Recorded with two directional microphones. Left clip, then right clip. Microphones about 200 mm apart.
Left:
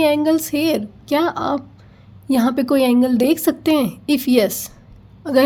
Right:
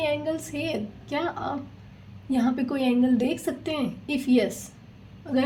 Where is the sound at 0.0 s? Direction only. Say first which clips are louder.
Left 11 dB; 40° left (ahead or behind).